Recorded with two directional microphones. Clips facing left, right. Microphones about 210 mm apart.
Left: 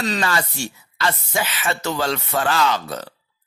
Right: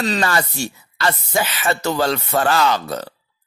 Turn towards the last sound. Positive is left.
turn(degrees=-40)  # may be behind; listen again after turning